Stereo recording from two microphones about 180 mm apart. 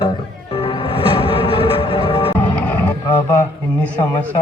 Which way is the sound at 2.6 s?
10° left (ahead or behind).